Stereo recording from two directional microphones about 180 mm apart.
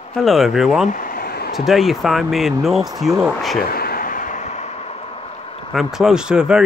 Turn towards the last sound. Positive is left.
turn(degrees=-5)  # may be behind; listen again after turning